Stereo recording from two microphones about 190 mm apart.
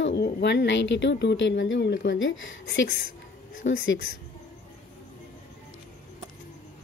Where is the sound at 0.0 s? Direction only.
65° left (ahead or behind).